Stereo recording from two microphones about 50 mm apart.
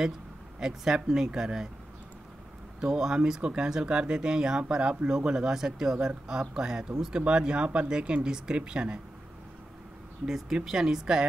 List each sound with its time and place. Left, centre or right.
0.6 s speech: centre
2.8 s speech: centre
10.2 s speech: centre